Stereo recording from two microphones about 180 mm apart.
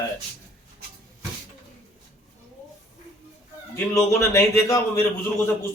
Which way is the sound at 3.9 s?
15° left (ahead or behind).